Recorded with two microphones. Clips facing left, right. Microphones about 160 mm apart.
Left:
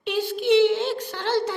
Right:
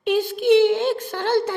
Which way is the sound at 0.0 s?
50° right (ahead or behind).